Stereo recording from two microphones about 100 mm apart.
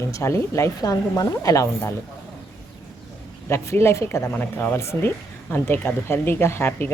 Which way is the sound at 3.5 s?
25° left (ahead or behind).